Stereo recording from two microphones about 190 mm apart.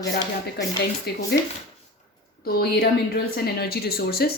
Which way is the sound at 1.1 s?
55° left (ahead or behind).